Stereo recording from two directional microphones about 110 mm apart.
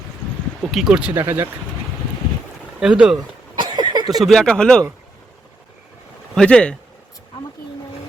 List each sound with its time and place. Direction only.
0.7 s speech: 5° right (ahead or behind)
1.2 s speech: 25° right (ahead or behind)
2.8 s speech: 5° right (ahead or behind)
3.6 s a sound: 45° right (ahead or behind)
4.2 s speech: 5° left (ahead or behind)
6.3 s speech: 10° left (ahead or behind)